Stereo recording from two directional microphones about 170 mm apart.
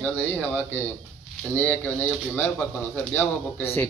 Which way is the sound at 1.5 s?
10° left (ahead or behind).